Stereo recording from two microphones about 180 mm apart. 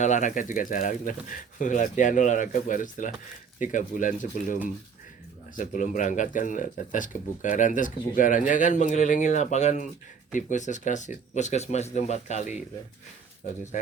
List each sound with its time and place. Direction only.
0.0 s speech: 45° left (ahead or behind)